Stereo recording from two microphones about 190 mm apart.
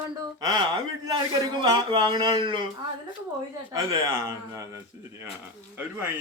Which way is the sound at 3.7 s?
15° right (ahead or behind).